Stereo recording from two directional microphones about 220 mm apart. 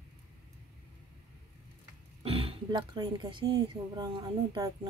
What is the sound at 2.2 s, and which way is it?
Speech, 25° right (ahead or behind).